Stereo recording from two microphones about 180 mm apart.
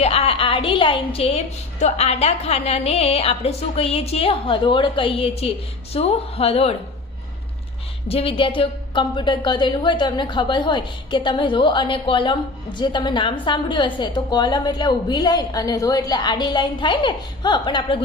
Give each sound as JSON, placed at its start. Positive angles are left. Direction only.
{"t": 0.0, "sound": "a woman's voice", "side_deg": 35}
{"t": 8.0, "sound": "a woman's voice", "side_deg": 30}